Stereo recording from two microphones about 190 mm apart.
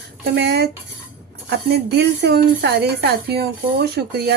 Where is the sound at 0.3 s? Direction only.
60° right (ahead or behind).